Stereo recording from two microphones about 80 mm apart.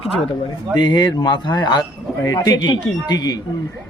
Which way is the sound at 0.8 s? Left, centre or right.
Left.